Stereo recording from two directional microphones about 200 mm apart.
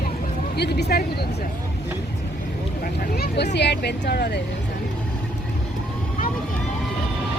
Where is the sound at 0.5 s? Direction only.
55° left (ahead or behind).